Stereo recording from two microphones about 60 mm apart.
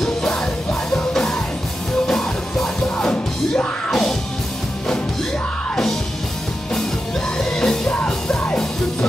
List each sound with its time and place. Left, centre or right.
0.0 s music: centre
7.3 s music: centre